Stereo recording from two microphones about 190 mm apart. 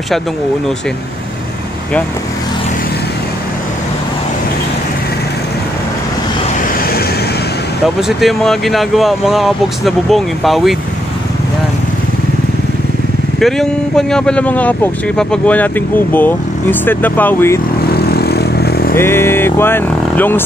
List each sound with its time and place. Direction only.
8.2 s speech: centre (ahead or behind)
13.4 s speech: centre (ahead or behind)
17.9 s vehicle: 55° left (ahead or behind)
18.9 s speech: 10° left (ahead or behind)